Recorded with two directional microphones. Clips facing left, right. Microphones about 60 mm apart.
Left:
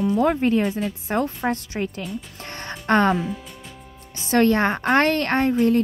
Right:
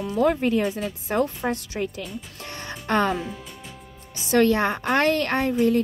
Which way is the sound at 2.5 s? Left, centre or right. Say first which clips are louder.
Left 5 dB; left.